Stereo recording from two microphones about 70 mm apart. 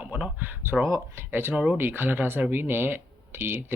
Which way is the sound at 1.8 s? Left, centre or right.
Right.